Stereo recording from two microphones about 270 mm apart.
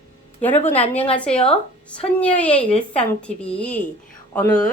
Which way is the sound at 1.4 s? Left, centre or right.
Centre.